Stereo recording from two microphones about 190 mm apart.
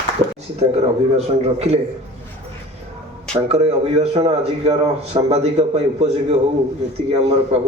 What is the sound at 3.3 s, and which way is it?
A man's voice, 35° right (ahead or behind).